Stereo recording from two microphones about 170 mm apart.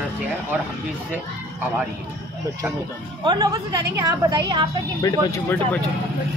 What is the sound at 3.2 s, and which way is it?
A woman's voice, 25° right (ahead or behind).